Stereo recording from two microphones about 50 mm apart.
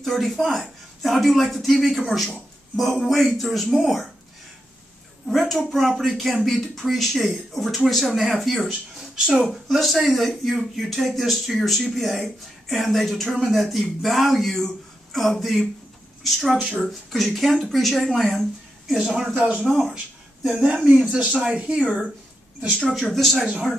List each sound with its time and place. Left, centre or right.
0.0 s speech: centre
5.2 s speech: centre
8.9 s speech: centre
9.7 s speech: centre
20.5 s speech: right
22.8 s speech: centre
23.1 s speech: centre